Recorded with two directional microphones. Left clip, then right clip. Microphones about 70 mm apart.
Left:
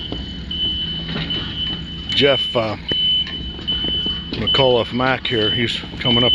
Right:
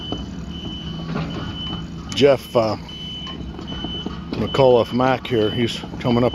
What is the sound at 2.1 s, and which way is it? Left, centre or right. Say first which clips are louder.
Speech: left 1 dB; right.